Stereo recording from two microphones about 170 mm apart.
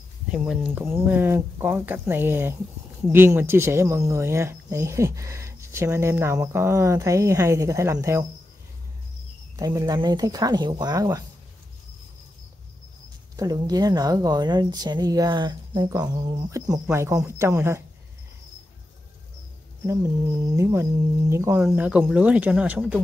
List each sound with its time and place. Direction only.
0.3 s speech: 5° right (ahead or behind)
9.6 s speech: 20° right (ahead or behind)
13.4 s speech: 25° right (ahead or behind)
20.5 s speech: 15° right (ahead or behind)